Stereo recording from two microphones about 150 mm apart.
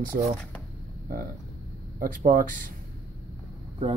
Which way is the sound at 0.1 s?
60° right (ahead or behind).